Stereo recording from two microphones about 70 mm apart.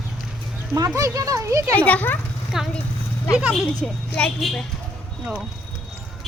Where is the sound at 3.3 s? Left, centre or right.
Centre.